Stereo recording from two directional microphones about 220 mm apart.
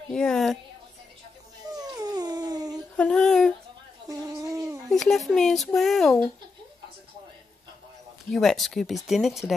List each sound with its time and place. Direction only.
0.1 s speech: 5° left (ahead or behind)
1.8 s dog: 15° right (ahead or behind)
3.0 s a sound: 5° left (ahead or behind)
4.1 s fowl: 15° right (ahead or behind)
4.9 s speech: centre (ahead or behind)
8.3 s speech: centre (ahead or behind)